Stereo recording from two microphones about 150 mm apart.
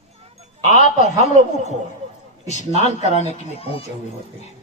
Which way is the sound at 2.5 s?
50° left (ahead or behind).